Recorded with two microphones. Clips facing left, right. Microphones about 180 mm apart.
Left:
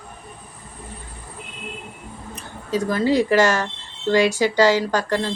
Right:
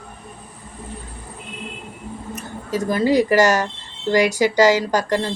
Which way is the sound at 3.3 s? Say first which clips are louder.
Right 2 dB; 45° right (ahead or behind).